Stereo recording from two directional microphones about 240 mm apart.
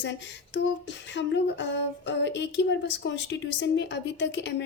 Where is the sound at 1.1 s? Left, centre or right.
Left.